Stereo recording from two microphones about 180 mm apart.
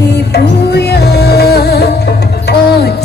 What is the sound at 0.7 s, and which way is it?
Music, 65° left (ahead or behind).